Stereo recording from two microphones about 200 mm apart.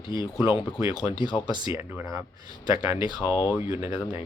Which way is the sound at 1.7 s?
10° right (ahead or behind).